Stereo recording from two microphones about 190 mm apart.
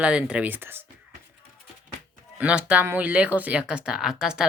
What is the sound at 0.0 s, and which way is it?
Speech, 5° right (ahead or behind).